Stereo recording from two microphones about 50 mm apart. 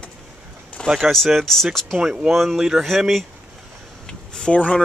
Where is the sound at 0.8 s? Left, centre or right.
Centre.